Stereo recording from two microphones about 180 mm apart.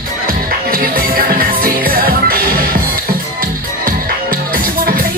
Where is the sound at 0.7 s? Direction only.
55° right (ahead or behind).